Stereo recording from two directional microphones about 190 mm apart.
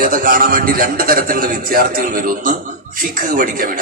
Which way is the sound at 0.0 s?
45° right (ahead or behind).